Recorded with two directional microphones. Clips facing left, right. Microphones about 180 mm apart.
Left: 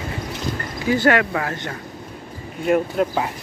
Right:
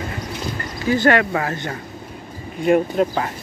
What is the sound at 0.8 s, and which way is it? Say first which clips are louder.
Speech: right 1 dB; 10° left (ahead or behind).